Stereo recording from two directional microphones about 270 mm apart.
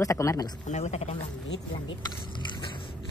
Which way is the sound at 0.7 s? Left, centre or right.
Left.